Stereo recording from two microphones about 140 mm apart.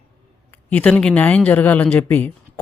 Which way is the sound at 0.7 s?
10° left (ahead or behind).